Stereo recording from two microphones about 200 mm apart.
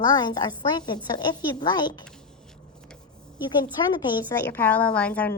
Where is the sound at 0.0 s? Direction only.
20° left (ahead or behind).